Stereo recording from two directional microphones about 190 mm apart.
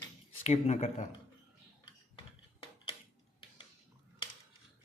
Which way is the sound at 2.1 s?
30° left (ahead or behind).